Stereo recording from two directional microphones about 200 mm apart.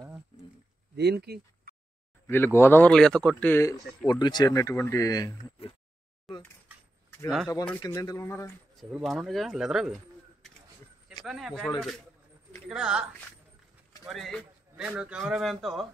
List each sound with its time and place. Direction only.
0.9 s speech: 55° right (ahead or behind)
2.2 s speech: 10° left (ahead or behind)
4.1 s speech: 20° left (ahead or behind)
6.3 s a sound: centre (ahead or behind)
7.2 s speech: centre (ahead or behind)
7.8 s speech: 20° left (ahead or behind)
8.7 s speech: centre (ahead or behind)
11.2 s speech: centre (ahead or behind)